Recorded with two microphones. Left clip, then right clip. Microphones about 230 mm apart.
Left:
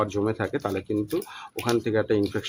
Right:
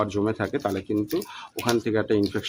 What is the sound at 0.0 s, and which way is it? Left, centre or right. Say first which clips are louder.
Speech: right 1 dB; centre.